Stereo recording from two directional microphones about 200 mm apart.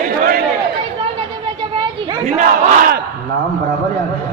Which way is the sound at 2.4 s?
40° right (ahead or behind).